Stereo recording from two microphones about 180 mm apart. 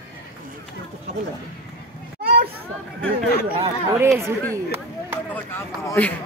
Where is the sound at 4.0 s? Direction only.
15° right (ahead or behind).